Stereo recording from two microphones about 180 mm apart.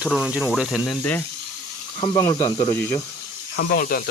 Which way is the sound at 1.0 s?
10° left (ahead or behind).